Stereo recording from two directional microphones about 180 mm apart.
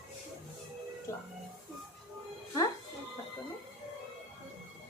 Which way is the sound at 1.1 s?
15° left (ahead or behind).